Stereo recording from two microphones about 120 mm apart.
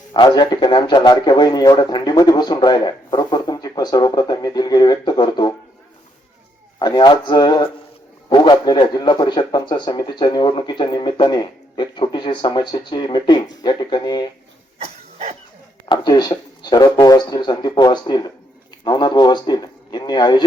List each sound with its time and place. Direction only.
0.1 s speech: 40° left (ahead or behind)
6.7 s speech: 35° left (ahead or behind)
15.9 s speech: 40° left (ahead or behind)